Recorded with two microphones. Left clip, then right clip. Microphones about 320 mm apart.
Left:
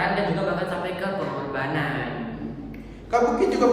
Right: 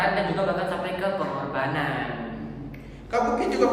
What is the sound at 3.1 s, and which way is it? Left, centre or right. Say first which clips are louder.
Speech: left 3 dB; centre.